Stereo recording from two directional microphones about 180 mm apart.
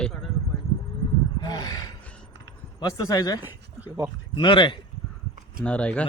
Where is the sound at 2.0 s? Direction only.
5° left (ahead or behind).